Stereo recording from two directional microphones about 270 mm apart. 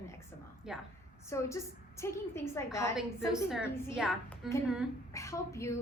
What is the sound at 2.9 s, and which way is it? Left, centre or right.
A woman's voice, centre.